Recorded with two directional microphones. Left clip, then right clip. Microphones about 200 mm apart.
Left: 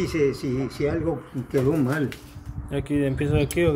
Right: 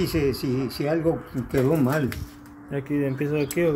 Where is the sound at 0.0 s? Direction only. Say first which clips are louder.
Left 1 dB; 30° right (ahead or behind).